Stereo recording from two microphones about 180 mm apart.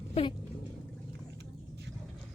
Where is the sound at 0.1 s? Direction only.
30° left (ahead or behind).